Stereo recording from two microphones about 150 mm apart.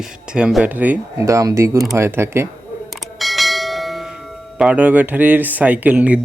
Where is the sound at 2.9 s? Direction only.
Centre (ahead or behind).